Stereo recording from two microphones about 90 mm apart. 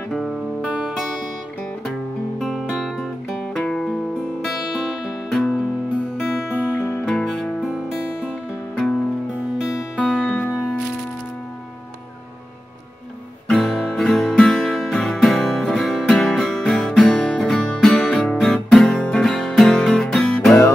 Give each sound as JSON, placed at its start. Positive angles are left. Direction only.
{"t": 0.1, "sound": "music", "side_deg": 5}
{"t": 5.3, "sound": "music", "side_deg": 10}
{"t": 7.1, "sound": "music", "side_deg": 5}
{"t": 9.6, "sound": "music", "side_deg": 0}
{"t": 13.5, "sound": "music", "side_deg": 5}